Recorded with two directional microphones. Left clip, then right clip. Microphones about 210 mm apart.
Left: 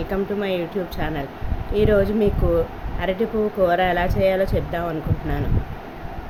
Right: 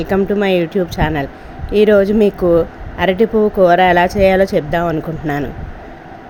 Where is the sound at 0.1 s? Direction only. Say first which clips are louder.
Right 10 dB; 35° right (ahead or behind).